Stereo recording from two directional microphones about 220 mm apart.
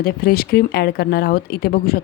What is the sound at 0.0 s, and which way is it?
Speech, 45° left (ahead or behind).